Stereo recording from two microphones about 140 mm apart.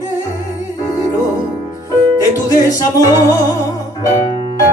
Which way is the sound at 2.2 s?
25° left (ahead or behind).